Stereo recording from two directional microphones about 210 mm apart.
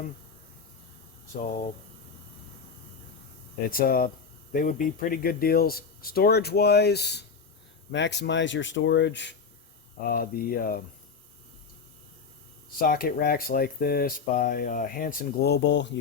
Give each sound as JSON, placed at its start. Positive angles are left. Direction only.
{"t": 3.7, "sound": "speech", "side_deg": 45}
{"t": 10.0, "sound": "speech", "side_deg": 45}
{"t": 12.8, "sound": "speech", "side_deg": 45}